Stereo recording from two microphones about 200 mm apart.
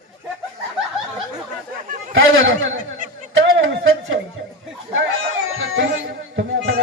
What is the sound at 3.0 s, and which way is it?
Snicker, 40° right (ahead or behind).